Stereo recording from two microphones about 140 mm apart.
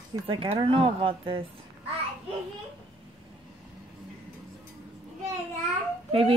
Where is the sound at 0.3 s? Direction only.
40° right (ahead or behind).